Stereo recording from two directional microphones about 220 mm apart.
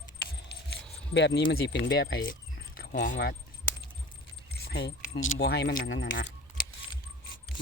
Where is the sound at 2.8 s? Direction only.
45° left (ahead or behind).